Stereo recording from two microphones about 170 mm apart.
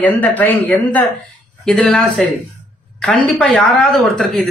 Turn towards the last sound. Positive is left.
turn(degrees=0)  # may be behind; listen again after turning